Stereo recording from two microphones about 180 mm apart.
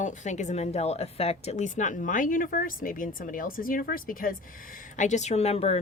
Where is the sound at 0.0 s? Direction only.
45° left (ahead or behind).